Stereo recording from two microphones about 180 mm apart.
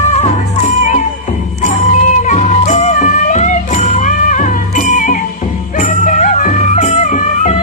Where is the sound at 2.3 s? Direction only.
40° left (ahead or behind).